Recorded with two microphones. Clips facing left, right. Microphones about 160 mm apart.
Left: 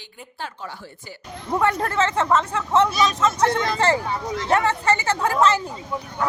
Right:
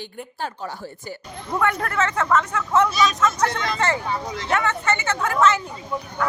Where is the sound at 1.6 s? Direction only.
30° left (ahead or behind).